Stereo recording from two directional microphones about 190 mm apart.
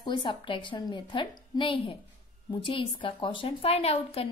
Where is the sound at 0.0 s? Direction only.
25° left (ahead or behind).